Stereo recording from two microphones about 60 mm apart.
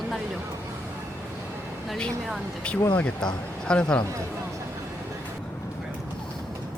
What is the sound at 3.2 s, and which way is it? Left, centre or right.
Speech, centre.